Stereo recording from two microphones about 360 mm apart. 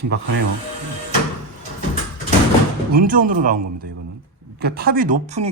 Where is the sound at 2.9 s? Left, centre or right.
Right.